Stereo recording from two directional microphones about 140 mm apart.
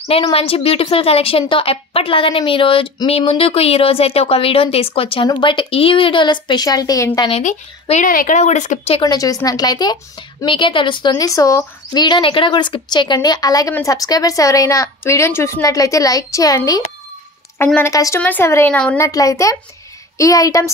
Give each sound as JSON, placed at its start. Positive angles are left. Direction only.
{"t": 0.1, "sound": "a woman's voice", "side_deg": 45}
{"t": 7.9, "sound": "speech", "side_deg": 80}
{"t": 8.4, "sound": "speech", "side_deg": 60}
{"t": 9.0, "sound": "a woman's voice", "side_deg": 25}
{"t": 18.9, "sound": "a woman's voice", "side_deg": 25}